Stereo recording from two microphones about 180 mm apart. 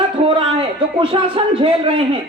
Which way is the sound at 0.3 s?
30° right (ahead or behind).